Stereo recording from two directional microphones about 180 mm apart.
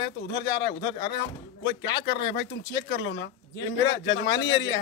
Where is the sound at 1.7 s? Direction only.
75° left (ahead or behind).